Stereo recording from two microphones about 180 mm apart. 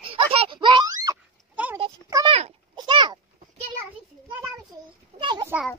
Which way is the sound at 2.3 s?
35° right (ahead or behind).